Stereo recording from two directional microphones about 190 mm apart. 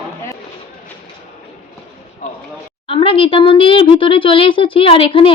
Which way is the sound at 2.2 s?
40° left (ahead or behind).